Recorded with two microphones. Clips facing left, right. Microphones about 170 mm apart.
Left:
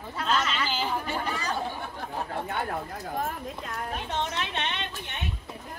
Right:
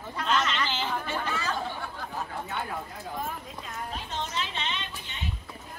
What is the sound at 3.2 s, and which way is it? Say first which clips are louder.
Speech: left 4 dB; 60° left (ahead or behind).